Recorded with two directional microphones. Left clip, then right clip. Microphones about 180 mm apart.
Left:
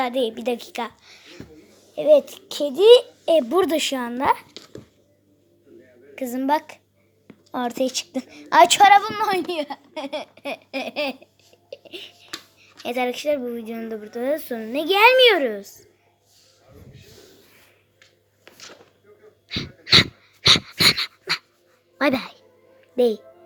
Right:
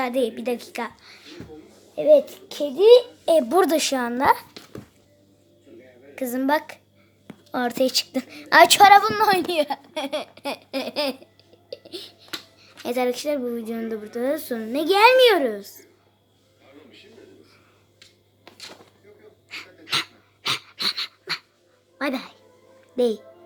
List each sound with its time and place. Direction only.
0.0 s a woman's voice: 10° left (ahead or behind)
0.3 s a child's voice: 20° left (ahead or behind)
3.5 s a woman's voice: centre (ahead or behind)
6.1 s a woman's voice: 10° left (ahead or behind)
18.4 s a sound: 10° left (ahead or behind)
19.5 s dog: 10° left (ahead or behind); by 21.4 s 30° left (ahead or behind)
21.9 s speech: 25° left (ahead or behind)
23.0 s speech: 10° left (ahead or behind)